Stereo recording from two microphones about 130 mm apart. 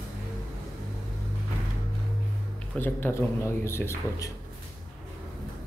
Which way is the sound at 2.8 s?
15° left (ahead or behind).